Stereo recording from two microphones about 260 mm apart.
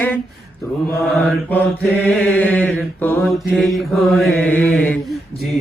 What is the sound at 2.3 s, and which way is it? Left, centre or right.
Chant, centre.